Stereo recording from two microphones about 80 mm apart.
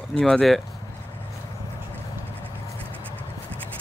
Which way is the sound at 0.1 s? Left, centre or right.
Centre.